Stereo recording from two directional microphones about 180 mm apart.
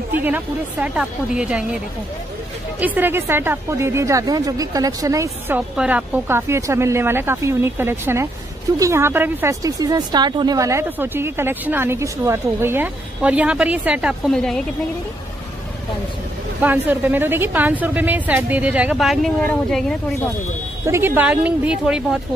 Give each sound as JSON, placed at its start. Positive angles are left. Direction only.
{"t": 0.1, "sound": "speech", "side_deg": -10}
{"t": 2.8, "sound": "speech", "side_deg": -10}
{"t": 16.6, "sound": "speech", "side_deg": -10}
{"t": 20.8, "sound": "speech", "side_deg": -15}